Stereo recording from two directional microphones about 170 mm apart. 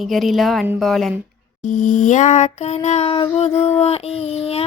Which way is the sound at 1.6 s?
50° left (ahead or behind).